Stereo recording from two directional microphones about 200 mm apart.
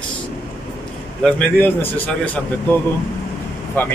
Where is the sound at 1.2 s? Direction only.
5° left (ahead or behind).